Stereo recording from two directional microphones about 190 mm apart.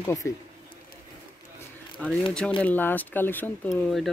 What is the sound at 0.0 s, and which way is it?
Speech, 15° left (ahead or behind).